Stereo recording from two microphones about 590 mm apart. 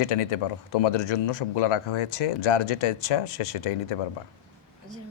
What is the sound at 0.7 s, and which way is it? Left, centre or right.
Speech, left.